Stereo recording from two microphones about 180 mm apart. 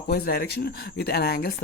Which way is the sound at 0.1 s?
60° left (ahead or behind).